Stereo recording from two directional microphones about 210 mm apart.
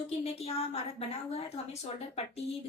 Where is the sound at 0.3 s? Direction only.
30° left (ahead or behind).